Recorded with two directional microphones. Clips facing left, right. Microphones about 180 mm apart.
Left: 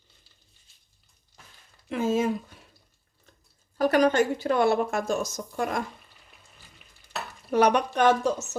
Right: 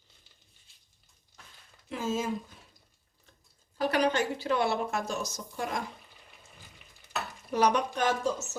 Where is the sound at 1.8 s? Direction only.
60° left (ahead or behind).